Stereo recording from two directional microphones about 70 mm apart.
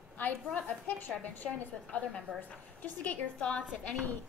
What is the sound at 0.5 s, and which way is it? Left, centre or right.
A woman's voice, centre.